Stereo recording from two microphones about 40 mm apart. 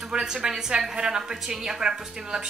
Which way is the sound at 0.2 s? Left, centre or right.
Centre.